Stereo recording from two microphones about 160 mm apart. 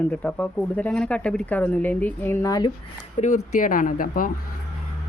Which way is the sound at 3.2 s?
45° left (ahead or behind).